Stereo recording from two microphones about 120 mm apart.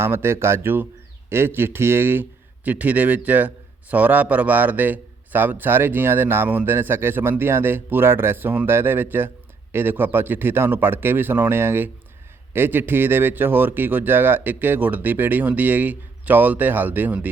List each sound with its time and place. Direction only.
0.0 s a man's voice: 20° right (ahead or behind)